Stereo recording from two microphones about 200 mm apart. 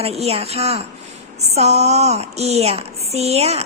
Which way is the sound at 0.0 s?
30° right (ahead or behind).